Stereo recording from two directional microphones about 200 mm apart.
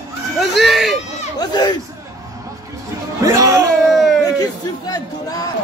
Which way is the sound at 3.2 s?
15° right (ahead or behind).